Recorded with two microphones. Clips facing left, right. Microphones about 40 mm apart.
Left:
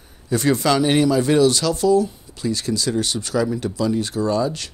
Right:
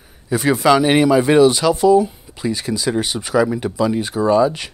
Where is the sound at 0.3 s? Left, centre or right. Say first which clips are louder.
Right 4 dB; centre.